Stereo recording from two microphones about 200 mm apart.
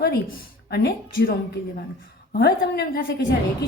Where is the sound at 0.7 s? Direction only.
50° left (ahead or behind).